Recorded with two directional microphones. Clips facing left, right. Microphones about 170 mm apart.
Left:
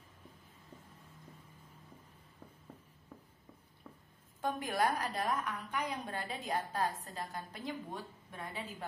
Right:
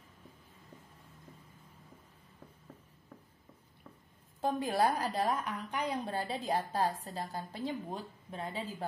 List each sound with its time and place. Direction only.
4.4 s a woman's voice: 30° right (ahead or behind)